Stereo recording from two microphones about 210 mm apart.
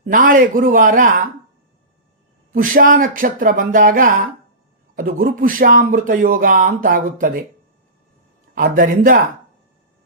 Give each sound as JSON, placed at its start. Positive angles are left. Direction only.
{"t": 0.0, "sound": "speech", "side_deg": -40}
{"t": 2.5, "sound": "speech", "side_deg": -40}
{"t": 8.5, "sound": "speech", "side_deg": -40}